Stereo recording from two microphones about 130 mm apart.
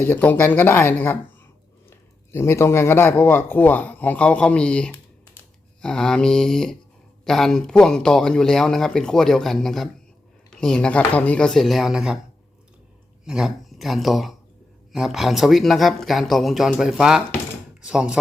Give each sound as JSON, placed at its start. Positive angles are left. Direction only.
{"t": 0.0, "sound": "a man's voice", "side_deg": 15}
{"t": 13.2, "sound": "speech", "side_deg": -5}